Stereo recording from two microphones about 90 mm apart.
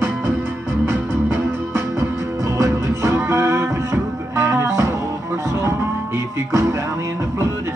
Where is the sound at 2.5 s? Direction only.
35° right (ahead or behind).